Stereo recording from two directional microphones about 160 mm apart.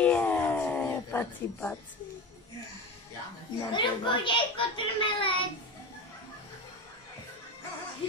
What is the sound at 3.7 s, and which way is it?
A child's voice, 30° left (ahead or behind).